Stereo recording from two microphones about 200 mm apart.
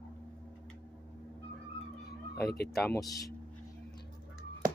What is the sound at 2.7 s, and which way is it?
Speech, centre (ahead or behind).